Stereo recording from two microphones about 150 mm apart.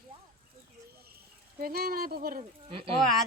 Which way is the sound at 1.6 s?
85° right.